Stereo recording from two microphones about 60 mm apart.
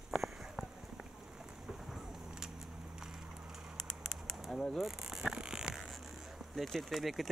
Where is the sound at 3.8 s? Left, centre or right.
Centre.